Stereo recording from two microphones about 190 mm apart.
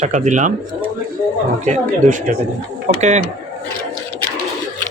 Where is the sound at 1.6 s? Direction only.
40° right (ahead or behind).